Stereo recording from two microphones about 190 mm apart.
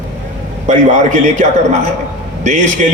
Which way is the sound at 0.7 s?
40° right (ahead or behind).